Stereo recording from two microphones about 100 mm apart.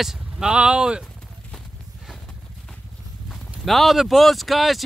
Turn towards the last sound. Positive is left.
turn(degrees=0)  # may be behind; listen again after turning